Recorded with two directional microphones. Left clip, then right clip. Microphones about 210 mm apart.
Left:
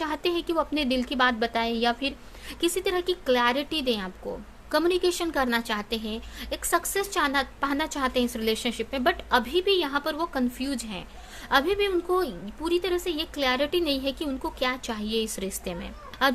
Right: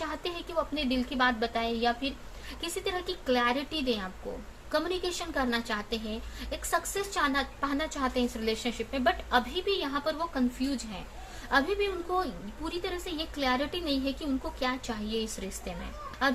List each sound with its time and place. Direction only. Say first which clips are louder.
0.0 s a woman's voice: left 7 dB; 45° left (ahead or behind)